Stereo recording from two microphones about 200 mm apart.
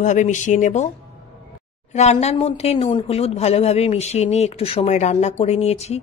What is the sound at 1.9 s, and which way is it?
Speech, 35° left (ahead or behind).